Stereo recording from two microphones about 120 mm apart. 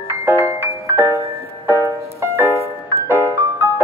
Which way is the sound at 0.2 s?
20° right (ahead or behind).